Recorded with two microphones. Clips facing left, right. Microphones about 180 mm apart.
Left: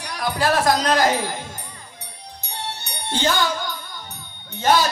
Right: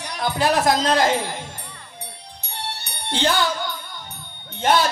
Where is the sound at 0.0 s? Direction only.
20° right (ahead or behind).